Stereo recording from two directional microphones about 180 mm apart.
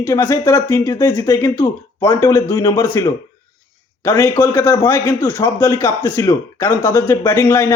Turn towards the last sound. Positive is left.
turn(degrees=15)  # may be behind; listen again after turning